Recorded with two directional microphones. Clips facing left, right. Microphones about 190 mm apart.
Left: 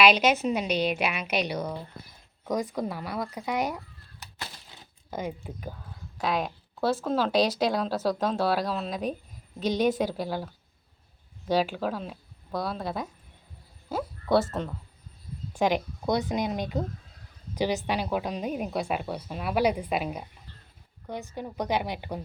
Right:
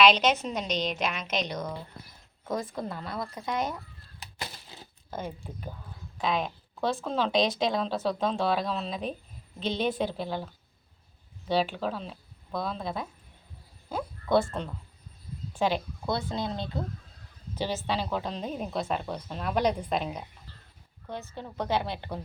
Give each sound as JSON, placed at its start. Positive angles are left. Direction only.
{"t": 0.0, "sound": "a woman's voice", "side_deg": 10}
{"t": 2.7, "sound": "a woman's voice", "side_deg": 10}
{"t": 5.1, "sound": "a woman's voice", "side_deg": 10}
{"t": 13.9, "sound": "a sound", "side_deg": 5}
{"t": 15.5, "sound": "a woman's voice", "side_deg": 15}